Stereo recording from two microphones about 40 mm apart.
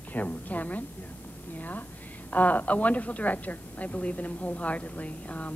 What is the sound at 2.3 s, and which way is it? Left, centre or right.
A woman's voice, left.